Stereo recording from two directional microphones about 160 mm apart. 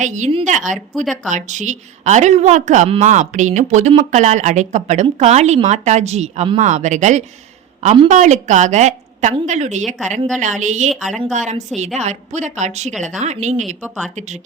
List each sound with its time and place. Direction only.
0.0 s speech: 50° right (ahead or behind)